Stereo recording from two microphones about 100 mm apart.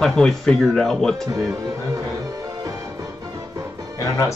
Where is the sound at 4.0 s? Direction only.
30° left (ahead or behind).